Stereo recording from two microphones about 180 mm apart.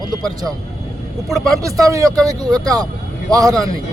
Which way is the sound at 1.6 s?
20° right (ahead or behind).